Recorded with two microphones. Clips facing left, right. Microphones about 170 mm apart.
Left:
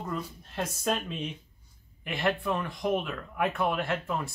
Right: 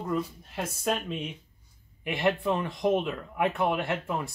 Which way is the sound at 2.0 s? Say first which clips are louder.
Right 3 dB; 15° right (ahead or behind).